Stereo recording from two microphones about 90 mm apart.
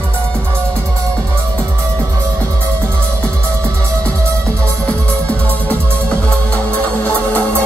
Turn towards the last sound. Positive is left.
turn(degrees=15)  # may be behind; listen again after turning